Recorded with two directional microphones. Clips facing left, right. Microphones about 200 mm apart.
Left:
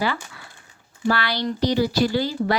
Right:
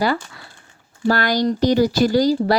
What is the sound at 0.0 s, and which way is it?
A woman's voice, 40° right (ahead or behind).